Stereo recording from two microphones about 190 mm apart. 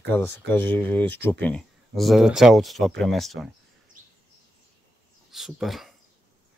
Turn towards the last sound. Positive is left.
turn(degrees=0)  # may be behind; listen again after turning